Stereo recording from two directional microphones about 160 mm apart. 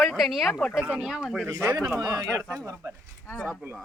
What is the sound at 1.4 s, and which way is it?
Speech, 15° right (ahead or behind).